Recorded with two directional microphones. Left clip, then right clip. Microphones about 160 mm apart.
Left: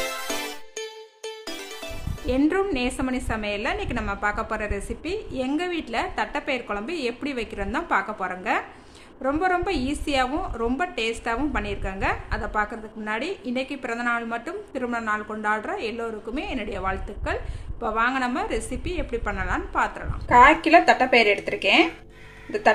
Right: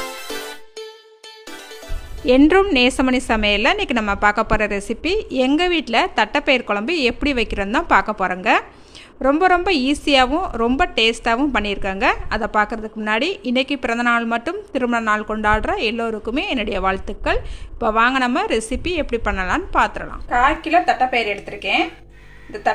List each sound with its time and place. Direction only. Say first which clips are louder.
2.2 s a woman's voice: right 10 dB; 70° right (ahead or behind)
20.2 s speech: left 3 dB; 20° left (ahead or behind)